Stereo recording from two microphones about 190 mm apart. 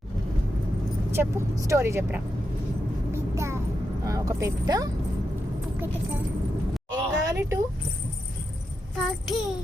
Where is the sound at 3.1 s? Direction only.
15° right (ahead or behind).